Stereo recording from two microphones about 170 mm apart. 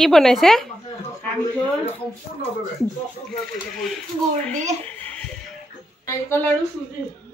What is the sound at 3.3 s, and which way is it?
Speech, centre (ahead or behind).